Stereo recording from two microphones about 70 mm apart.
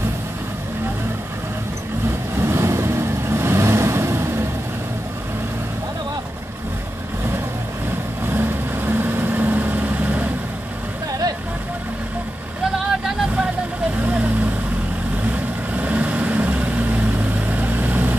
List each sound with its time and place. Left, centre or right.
2.3 s vehicle: right
8.3 s vehicle: right
14.0 s vehicle: right
15.7 s vehicle: right